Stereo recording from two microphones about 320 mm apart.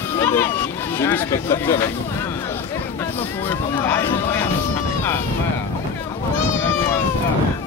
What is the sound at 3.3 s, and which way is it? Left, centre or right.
Speech, centre.